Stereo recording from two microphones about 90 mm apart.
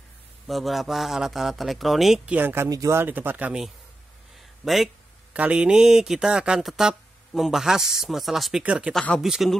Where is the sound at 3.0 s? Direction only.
25° right (ahead or behind).